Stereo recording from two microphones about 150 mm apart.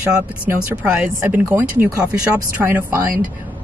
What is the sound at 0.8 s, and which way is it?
Speech, 10° right (ahead or behind).